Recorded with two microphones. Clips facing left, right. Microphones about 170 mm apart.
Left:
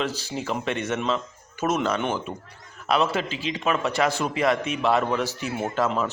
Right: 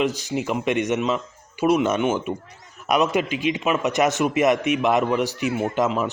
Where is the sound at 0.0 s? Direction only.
15° right (ahead or behind).